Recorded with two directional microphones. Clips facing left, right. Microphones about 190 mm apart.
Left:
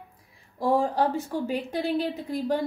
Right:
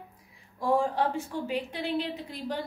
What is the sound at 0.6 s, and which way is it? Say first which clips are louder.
A woman's voice: left 3 dB; 35° left (ahead or behind).